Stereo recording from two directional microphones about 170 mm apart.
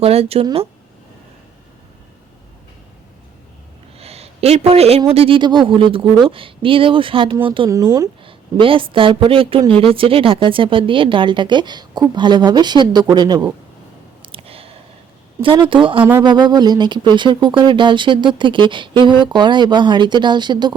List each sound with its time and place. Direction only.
0.0 s speech: 35° right (ahead or behind)
3.9 s speech: 35° right (ahead or behind)
7.7 s speech: 20° right (ahead or behind)
8.2 s speech: 30° right (ahead or behind)
14.2 s a sound: 35° right (ahead or behind)
15.4 s speech: 30° right (ahead or behind)